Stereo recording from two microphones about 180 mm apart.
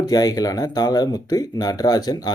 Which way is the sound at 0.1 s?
20° left (ahead or behind).